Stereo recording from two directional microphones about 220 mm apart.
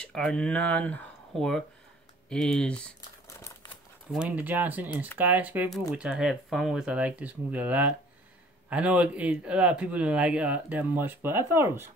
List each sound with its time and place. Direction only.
0.0 s speech: 5° left (ahead or behind)
3.0 s crumpling: 15° left (ahead or behind)
4.1 s speech: 5° right (ahead or behind)